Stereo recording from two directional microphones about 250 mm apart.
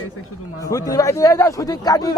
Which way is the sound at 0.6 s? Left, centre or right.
Centre.